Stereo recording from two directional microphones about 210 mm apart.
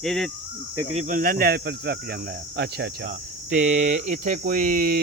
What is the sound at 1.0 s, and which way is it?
Speech, 40° right (ahead or behind).